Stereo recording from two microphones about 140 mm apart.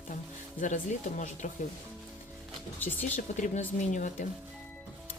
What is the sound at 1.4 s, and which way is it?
Speech, 60° left (ahead or behind).